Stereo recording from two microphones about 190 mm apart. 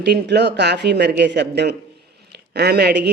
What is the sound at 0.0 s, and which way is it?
Speech, 60° right (ahead or behind).